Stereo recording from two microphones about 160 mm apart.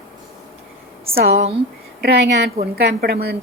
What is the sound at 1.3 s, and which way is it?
Speech, 40° right (ahead or behind).